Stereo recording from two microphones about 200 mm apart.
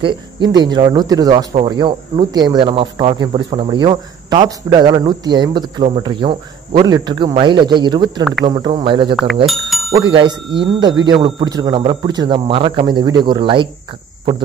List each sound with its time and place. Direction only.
0.0 s speech: 25° right (ahead or behind)
9.5 s bicycle bell: centre (ahead or behind)
9.9 s speech: 25° right (ahead or behind)